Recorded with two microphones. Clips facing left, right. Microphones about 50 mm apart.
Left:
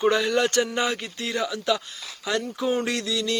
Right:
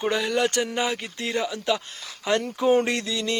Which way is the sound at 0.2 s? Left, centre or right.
Centre.